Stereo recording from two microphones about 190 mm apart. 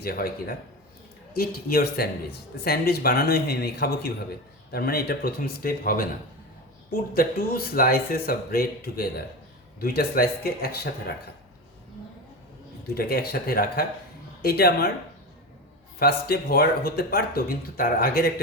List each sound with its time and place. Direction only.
0.0 s speech: 50° left (ahead or behind)
12.9 s speech: 55° left (ahead or behind)
16.0 s speech: 55° left (ahead or behind)